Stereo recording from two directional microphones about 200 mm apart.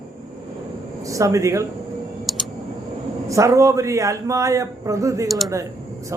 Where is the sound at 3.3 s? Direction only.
15° right (ahead or behind).